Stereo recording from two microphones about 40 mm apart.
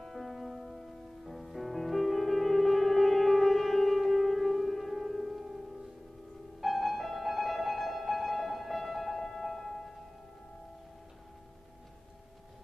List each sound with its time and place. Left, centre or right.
0.0 s music: centre
6.6 s music: centre